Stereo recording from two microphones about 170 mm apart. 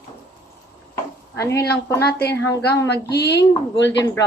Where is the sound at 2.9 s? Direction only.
75° left (ahead or behind).